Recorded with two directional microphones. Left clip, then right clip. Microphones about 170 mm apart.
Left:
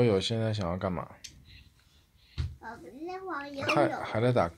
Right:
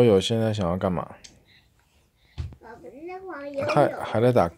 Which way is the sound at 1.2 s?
Centre (ahead or behind).